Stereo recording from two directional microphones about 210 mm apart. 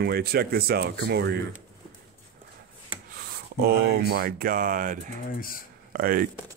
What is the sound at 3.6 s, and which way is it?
Speech, 45° right (ahead or behind).